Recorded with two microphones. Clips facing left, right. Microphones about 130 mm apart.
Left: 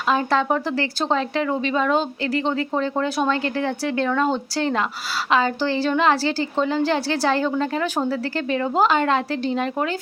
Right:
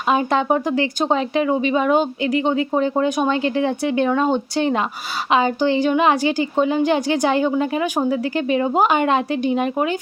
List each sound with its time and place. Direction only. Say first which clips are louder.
0.1 s speech: right 2 dB; 20° right (ahead or behind)